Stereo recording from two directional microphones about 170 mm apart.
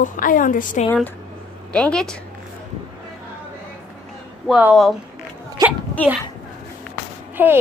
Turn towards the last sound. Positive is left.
turn(degrees=-10)  # may be behind; listen again after turning